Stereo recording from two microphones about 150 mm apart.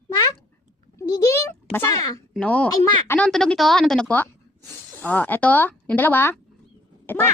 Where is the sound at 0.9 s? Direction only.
20° left (ahead or behind).